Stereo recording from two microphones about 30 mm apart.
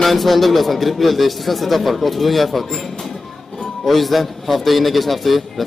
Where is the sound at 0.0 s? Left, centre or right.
Centre.